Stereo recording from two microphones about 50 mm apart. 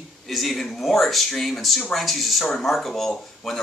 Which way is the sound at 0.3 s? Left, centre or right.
Centre.